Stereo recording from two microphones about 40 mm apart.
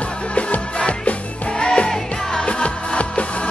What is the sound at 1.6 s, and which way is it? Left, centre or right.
Music, left.